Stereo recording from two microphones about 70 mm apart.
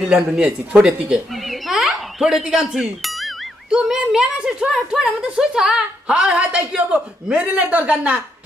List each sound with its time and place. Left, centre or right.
0.1 s a woman's voice: centre
1.5 s music: centre
3.7 s a woman's voice: centre